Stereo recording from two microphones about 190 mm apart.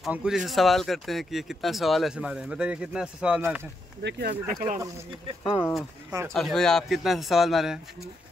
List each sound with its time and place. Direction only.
0.0 s speech: 5° right (ahead or behind)
4.0 s speech: 55° right (ahead or behind)
5.4 s speech: 25° left (ahead or behind)
6.3 s speech: centre (ahead or behind)